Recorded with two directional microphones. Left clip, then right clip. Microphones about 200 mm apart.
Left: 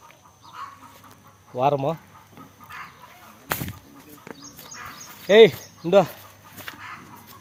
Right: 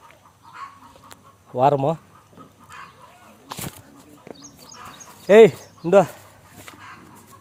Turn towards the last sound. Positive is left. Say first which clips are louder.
# right 2 dB
turn(degrees=-25)  # may be behind; listen again after turning